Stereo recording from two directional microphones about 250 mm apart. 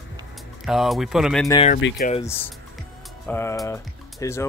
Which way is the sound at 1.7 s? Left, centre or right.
Left.